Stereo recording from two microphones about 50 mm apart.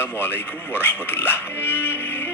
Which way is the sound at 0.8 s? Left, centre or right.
Left.